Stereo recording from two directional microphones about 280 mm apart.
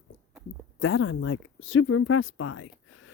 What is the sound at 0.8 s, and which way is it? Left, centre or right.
Speech, left.